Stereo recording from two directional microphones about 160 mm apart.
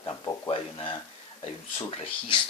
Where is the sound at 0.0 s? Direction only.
25° left (ahead or behind).